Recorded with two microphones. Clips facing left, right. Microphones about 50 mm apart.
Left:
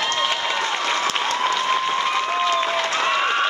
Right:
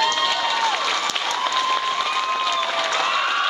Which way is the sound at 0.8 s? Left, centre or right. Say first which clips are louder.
Left 1 dB; left.